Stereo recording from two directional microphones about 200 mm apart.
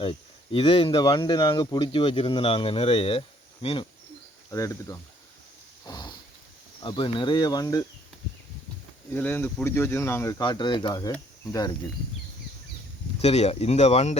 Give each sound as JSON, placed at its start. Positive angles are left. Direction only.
{"t": 0.0, "sound": "speech", "side_deg": 25}
{"t": 4.5, "sound": "speech", "side_deg": 15}
{"t": 5.8, "sound": "a sound", "side_deg": 20}
{"t": 6.8, "sound": "speech", "side_deg": 25}
{"t": 9.1, "sound": "speech", "side_deg": 10}
{"t": 13.2, "sound": "speech", "side_deg": 30}